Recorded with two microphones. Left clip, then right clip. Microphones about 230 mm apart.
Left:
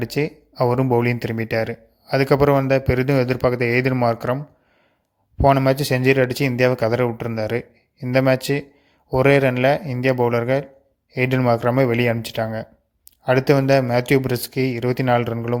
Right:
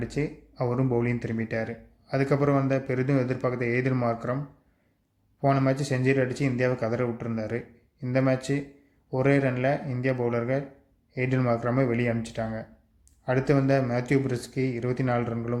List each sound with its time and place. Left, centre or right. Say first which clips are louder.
0.0 s speech: left 8 dB; left
5.4 s speech: left 9 dB; left